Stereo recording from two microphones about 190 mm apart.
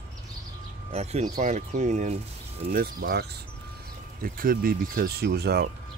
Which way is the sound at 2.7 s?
50° right (ahead or behind).